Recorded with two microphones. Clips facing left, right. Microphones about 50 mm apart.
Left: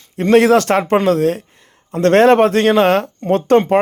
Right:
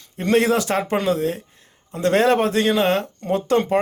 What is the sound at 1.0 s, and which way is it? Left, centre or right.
Speech, left.